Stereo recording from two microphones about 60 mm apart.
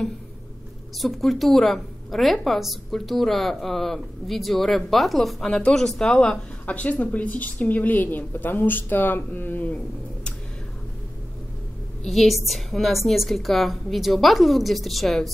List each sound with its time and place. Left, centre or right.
0.9 s a woman's voice: centre; by 9.8 s left
12.0 s a woman's voice: centre